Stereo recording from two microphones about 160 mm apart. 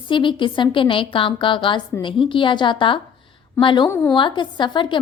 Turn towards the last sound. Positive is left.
turn(degrees=30)  # may be behind; listen again after turning